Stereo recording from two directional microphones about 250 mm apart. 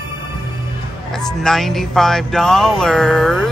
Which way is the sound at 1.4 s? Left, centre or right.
Centre.